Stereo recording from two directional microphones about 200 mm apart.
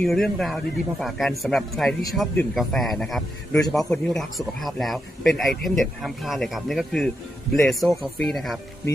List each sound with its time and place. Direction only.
0.0 s a man's voice: centre (ahead or behind)